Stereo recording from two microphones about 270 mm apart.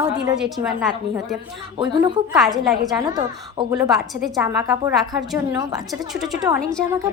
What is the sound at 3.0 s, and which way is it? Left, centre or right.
A woman's voice, centre.